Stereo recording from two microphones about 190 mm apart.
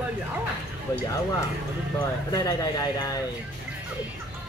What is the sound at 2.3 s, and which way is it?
Speech, 20° left (ahead or behind).